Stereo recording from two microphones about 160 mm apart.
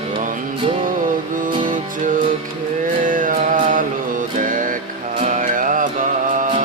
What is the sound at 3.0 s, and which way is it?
Music, 55° right (ahead or behind).